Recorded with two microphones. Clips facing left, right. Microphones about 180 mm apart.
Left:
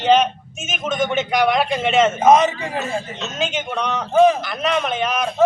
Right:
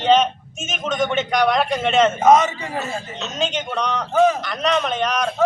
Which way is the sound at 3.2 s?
5° left (ahead or behind).